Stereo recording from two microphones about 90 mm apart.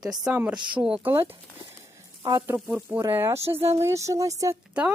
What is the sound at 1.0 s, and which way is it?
Speech, 25° right (ahead or behind).